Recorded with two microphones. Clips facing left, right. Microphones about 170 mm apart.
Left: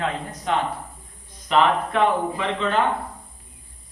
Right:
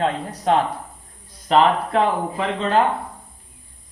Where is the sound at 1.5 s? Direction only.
35° right (ahead or behind).